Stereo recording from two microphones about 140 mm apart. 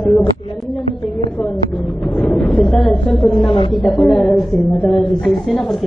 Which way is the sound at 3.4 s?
35° left (ahead or behind).